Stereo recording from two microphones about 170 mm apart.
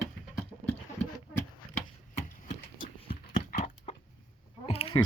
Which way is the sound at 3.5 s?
45° left (ahead or behind).